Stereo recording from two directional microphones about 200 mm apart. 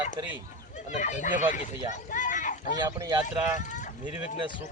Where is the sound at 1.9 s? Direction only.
40° left (ahead or behind).